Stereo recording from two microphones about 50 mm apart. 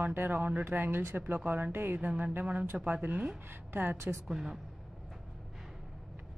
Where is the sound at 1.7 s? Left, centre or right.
Right.